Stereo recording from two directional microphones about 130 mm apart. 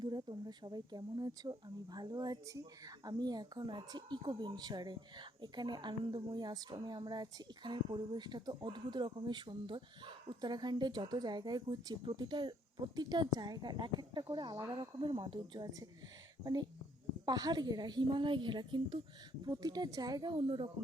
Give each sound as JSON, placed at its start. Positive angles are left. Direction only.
{"t": 0.0, "sound": "speech", "side_deg": -35}
{"t": 6.4, "sound": "speech", "side_deg": -30}
{"t": 16.4, "sound": "speech", "side_deg": -30}